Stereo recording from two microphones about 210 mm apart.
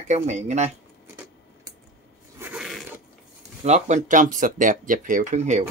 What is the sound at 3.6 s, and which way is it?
Speech, 35° right (ahead or behind).